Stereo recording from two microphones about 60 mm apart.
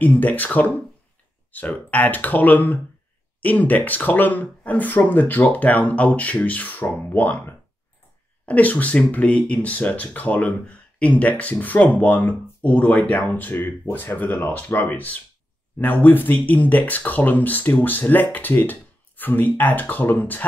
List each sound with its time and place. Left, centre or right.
0.0 s speech: left